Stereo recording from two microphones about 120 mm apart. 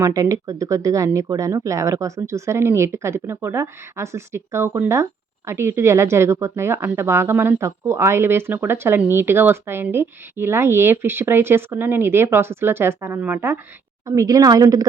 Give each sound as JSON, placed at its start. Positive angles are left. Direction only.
{"t": 0.0, "sound": "speech", "side_deg": -25}